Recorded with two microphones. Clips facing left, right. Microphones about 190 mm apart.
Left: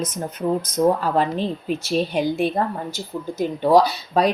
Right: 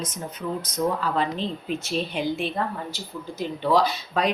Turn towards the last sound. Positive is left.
turn(degrees=35)  # may be behind; listen again after turning